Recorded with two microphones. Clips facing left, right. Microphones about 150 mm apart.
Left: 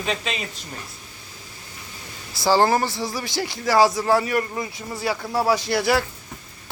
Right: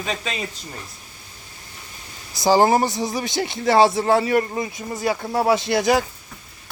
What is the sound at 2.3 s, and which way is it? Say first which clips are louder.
Speech: right 2 dB; 20° right (ahead or behind).